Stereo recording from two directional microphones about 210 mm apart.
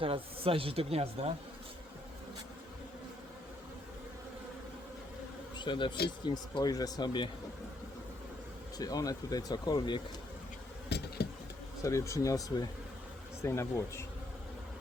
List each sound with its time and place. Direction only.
0.0 s speech: 25° right (ahead or behind)
5.5 s bee: 20° left (ahead or behind)
6.1 s speech: 20° left (ahead or behind)
8.8 s speech: 20° left (ahead or behind)
10.8 s a sound: 50° left (ahead or behind)
11.8 s speech: 15° left (ahead or behind)